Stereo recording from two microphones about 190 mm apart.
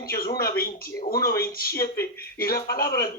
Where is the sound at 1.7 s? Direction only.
15° left (ahead or behind).